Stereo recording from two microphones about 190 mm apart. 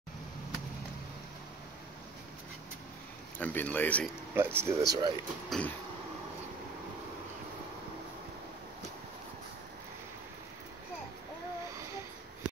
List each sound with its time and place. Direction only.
3.3 s speech: 10° left (ahead or behind)
4.4 s speech: 10° right (ahead or behind)
5.5 s speech: 5° left (ahead or behind)